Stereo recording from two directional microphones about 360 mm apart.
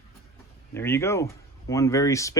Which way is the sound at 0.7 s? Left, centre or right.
Centre.